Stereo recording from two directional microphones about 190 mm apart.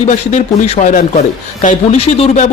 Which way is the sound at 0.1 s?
40° left (ahead or behind).